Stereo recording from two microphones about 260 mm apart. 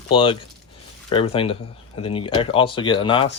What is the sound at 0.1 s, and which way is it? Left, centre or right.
Speech, centre.